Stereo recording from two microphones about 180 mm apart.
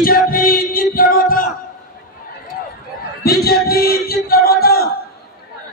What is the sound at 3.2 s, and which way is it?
Speech, 60° left (ahead or behind).